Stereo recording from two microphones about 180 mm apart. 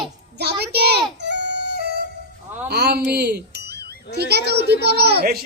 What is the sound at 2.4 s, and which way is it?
Music, 10° right (ahead or behind).